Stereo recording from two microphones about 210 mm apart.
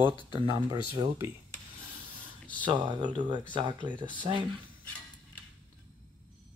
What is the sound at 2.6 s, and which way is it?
Speech, 20° right (ahead or behind).